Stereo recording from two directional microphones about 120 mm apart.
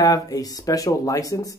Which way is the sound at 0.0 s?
30° left (ahead or behind).